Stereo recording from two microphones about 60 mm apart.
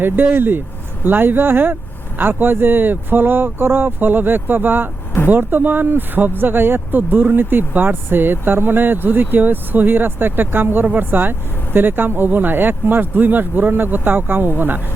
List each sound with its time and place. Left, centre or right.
0.0 s speech: right